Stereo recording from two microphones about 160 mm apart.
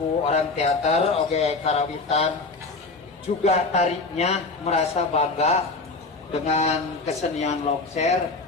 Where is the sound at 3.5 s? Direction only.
45° left (ahead or behind).